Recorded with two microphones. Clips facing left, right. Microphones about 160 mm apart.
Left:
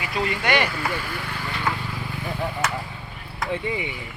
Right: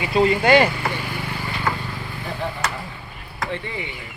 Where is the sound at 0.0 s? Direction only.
30° right (ahead or behind).